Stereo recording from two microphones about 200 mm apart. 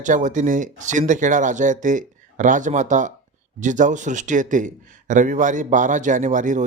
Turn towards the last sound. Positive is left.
turn(degrees=-40)  # may be behind; listen again after turning